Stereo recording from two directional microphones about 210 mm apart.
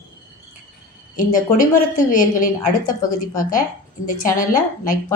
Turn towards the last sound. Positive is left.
turn(degrees=40)  # may be behind; listen again after turning